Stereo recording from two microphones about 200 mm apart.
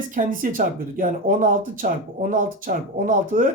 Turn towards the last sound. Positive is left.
turn(degrees=-40)  # may be behind; listen again after turning